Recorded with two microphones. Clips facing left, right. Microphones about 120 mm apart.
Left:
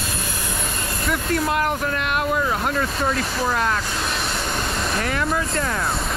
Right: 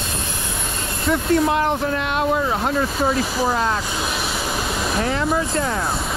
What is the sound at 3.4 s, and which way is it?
Speech, 30° right (ahead or behind).